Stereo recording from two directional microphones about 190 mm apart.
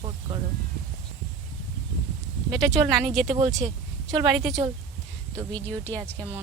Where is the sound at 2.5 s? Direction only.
Centre (ahead or behind).